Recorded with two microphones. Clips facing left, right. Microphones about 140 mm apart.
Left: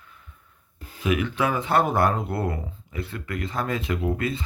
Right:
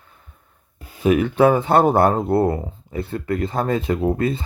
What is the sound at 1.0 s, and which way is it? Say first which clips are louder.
Speech: right 9 dB; 35° right (ahead or behind).